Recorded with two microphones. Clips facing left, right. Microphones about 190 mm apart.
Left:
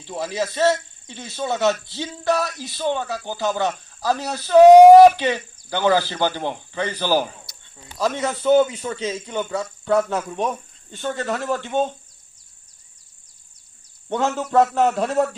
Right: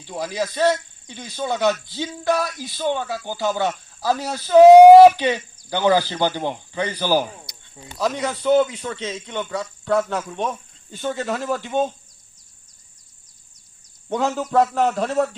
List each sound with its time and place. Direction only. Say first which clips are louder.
0.3 s a man's voice: even; 5° left (ahead or behind); by 7.5 s 10° right (ahead or behind)
7.9 s a man's voice: left 1 dB; centre (ahead or behind)
11.0 s a man's voice: even; 15° right (ahead or behind)
14.1 s a man's voice: even; centre (ahead or behind)